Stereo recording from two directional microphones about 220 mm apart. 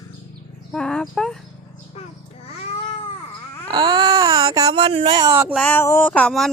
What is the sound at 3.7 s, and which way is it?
Baby cry, 20° right (ahead or behind).